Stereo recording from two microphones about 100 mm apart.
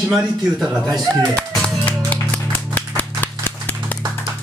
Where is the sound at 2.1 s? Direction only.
15° left (ahead or behind).